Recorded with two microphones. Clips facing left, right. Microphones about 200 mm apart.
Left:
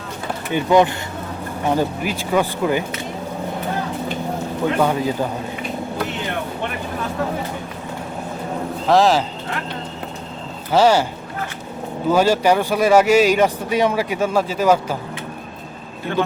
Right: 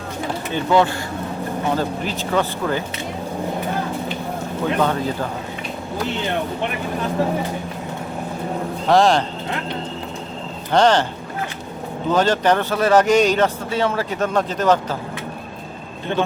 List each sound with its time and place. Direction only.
0.5 s speech: 15° left (ahead or behind)
4.8 s speech: 10° left (ahead or behind)
8.9 s speech: centre (ahead or behind)
10.7 s speech: 5° left (ahead or behind)
12.0 s speech: 10° left (ahead or behind)
16.1 s a man's voice: 20° right (ahead or behind)